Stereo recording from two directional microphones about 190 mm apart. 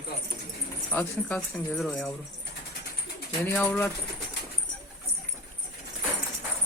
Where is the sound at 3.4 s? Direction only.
10° left (ahead or behind).